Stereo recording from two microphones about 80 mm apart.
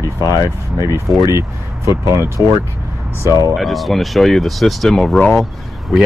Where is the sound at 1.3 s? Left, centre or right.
Right.